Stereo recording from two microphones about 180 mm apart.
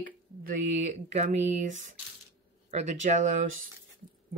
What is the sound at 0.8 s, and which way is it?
Speech, 40° right (ahead or behind).